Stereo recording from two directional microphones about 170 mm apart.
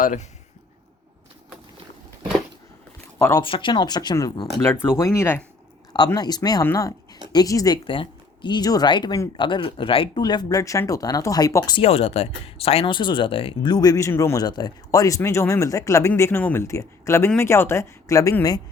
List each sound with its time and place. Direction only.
0.0 s speech: 50° left (ahead or behind)
3.2 s speech: 15° left (ahead or behind)
3.4 s speech: 30° left (ahead or behind)
11.8 s speech: 35° left (ahead or behind); by 18.6 s 20° left (ahead or behind)